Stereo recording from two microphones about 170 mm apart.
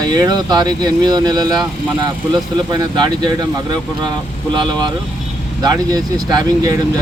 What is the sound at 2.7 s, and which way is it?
Speech, 25° right (ahead or behind).